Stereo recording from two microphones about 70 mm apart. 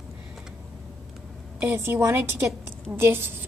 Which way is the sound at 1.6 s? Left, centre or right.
Right.